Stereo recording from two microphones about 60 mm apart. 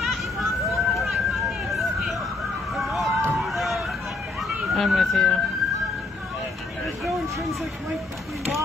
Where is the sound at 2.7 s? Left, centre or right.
Centre.